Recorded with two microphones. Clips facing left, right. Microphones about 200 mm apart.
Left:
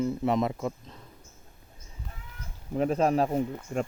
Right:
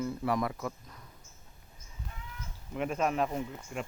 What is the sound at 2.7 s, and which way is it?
Speech, 35° left (ahead or behind).